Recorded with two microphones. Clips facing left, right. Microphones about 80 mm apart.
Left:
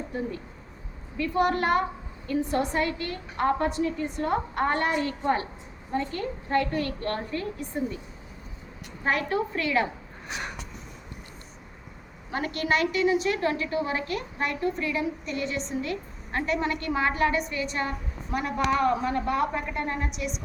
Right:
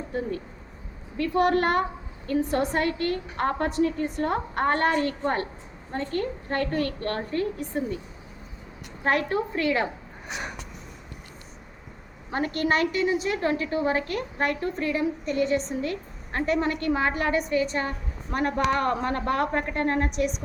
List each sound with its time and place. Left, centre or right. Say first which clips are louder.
1.1 s a woman's voice: right 2 dB; right
9.0 s a woman's voice: right 2 dB; right
10.2 s speech: right 1 dB; centre
12.3 s a woman's voice: right 2 dB; right
18.3 s a woman's voice: right 1 dB; right